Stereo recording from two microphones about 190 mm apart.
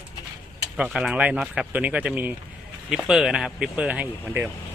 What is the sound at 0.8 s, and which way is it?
Speech, 5° right (ahead or behind).